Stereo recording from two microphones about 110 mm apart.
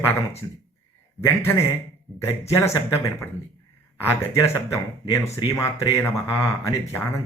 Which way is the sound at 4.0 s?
25° left (ahead or behind).